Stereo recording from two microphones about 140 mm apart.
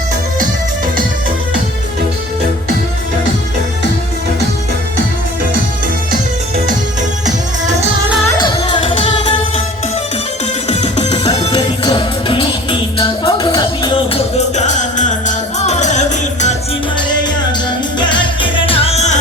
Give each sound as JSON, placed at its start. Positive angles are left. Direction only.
{"t": 7.3, "sound": "music", "side_deg": -60}
{"t": 8.4, "sound": "music", "side_deg": 35}
{"t": 10.7, "sound": "music", "side_deg": 55}
{"t": 11.5, "sound": "music", "side_deg": 30}
{"t": 18.0, "sound": "music", "side_deg": 35}